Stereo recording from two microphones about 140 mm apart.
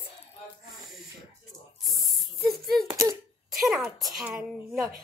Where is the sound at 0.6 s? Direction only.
Centre (ahead or behind).